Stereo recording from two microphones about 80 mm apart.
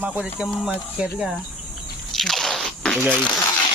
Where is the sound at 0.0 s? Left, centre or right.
Centre.